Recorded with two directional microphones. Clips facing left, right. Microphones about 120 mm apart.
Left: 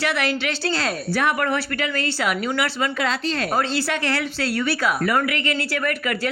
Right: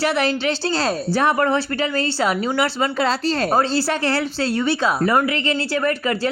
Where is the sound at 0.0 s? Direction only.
30° right (ahead or behind).